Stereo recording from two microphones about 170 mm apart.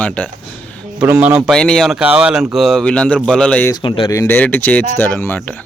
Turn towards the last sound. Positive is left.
turn(degrees=10)  # may be behind; listen again after turning